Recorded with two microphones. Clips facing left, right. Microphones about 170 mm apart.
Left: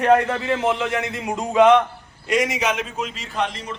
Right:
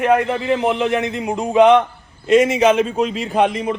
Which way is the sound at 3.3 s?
55° right (ahead or behind).